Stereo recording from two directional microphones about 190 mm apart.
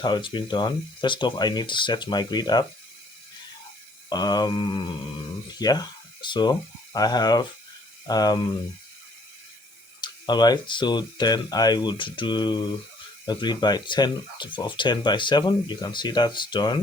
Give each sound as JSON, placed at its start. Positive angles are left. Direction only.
{"t": 0.0, "sound": "speech", "side_deg": 25}
{"t": 4.1, "sound": "speech", "side_deg": 20}
{"t": 10.0, "sound": "speech", "side_deg": 20}